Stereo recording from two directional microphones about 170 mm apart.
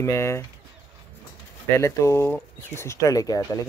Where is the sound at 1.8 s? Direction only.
15° left (ahead or behind).